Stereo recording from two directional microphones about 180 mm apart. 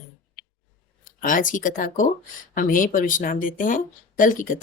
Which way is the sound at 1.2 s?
45° left (ahead or behind).